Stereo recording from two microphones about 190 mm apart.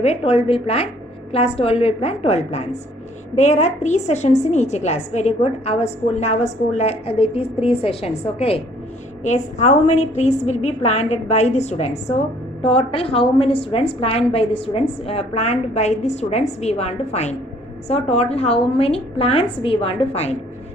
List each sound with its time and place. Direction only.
0.0 s a woman's voice: 35° left (ahead or behind)